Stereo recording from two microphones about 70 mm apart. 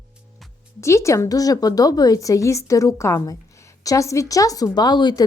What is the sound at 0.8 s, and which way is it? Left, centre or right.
A woman's voice, left.